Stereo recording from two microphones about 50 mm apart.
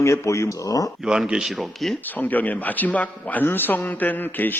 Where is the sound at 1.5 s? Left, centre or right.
Centre.